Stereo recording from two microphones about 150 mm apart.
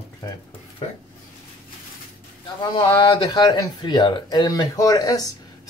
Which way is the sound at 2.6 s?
30° left (ahead or behind).